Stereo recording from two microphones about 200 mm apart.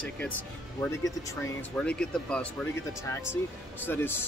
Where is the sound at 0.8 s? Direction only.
15° left (ahead or behind).